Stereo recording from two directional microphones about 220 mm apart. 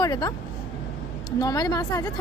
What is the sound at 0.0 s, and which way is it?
Speech, 20° left (ahead or behind).